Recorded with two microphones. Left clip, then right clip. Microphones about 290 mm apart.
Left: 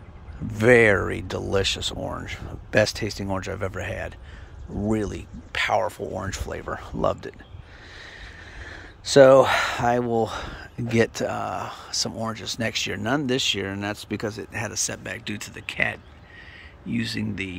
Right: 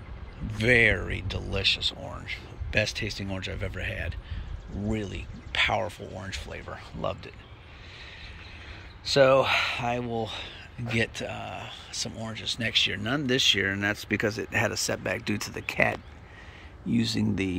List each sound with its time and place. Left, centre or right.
0.5 s speech: centre
8.6 s speech: left; by 17.6 s centre